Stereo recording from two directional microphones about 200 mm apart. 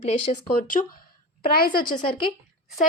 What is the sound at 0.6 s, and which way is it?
A woman's voice, 45° left (ahead or behind).